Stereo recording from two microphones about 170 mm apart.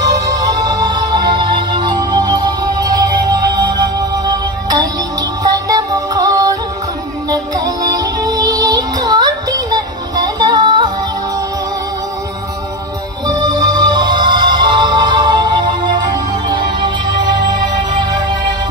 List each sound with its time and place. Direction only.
0.0 s music: 20° right (ahead or behind)
5.4 s music: 20° right (ahead or behind)
13.3 s music: 25° right (ahead or behind)